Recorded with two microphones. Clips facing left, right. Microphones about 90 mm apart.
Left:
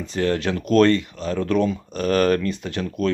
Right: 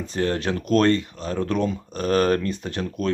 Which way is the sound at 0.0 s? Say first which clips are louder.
Left 2 dB; 35° right (ahead or behind).